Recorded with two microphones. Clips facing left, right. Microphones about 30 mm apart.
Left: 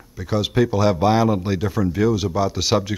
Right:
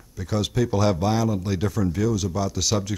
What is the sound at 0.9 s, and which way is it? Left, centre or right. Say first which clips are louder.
Speech: left 6 dB; left.